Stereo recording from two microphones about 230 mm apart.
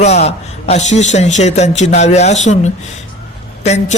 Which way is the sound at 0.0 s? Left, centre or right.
Left.